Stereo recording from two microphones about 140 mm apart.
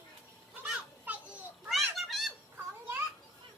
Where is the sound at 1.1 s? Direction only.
10° right (ahead or behind).